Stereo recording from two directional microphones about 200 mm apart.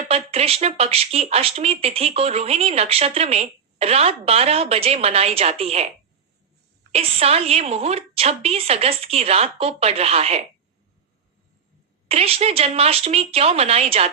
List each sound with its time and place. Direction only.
0.1 s speech: 30° right (ahead or behind)
6.9 s speech: 30° right (ahead or behind)
12.0 s speech: 30° right (ahead or behind)